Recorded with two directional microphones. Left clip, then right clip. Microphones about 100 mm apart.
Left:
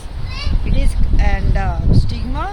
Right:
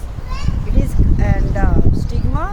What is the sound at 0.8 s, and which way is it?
Speech, 30° right (ahead or behind).